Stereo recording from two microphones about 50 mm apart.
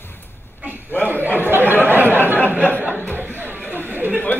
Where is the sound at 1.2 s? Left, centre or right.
Right.